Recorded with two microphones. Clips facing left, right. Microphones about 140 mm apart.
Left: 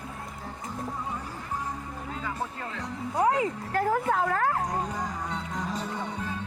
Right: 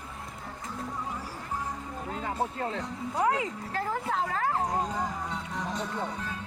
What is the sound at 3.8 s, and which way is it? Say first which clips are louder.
Speech: left 5 dB; 55° left (ahead or behind).